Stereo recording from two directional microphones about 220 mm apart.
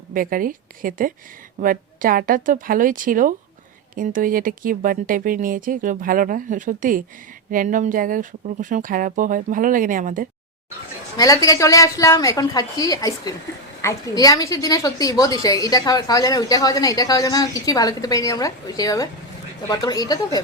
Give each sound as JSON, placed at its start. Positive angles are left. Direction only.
{"t": 0.1, "sound": "speech", "side_deg": -40}
{"t": 11.4, "sound": "a woman's voice", "side_deg": 15}